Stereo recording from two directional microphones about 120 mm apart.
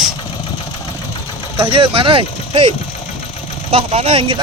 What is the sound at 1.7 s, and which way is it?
Speech, 50° right (ahead or behind).